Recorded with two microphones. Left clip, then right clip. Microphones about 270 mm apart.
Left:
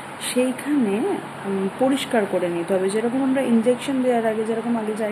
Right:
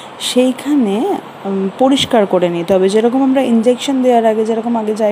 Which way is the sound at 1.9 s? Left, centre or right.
Right.